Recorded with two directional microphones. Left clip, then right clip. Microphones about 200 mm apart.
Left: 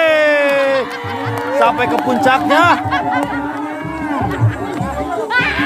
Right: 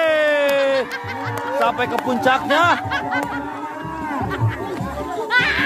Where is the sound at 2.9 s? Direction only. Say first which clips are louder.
Left 5 dB; 55° right (ahead or behind).